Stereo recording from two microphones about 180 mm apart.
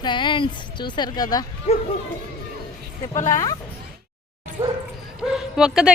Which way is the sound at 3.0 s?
20° left (ahead or behind).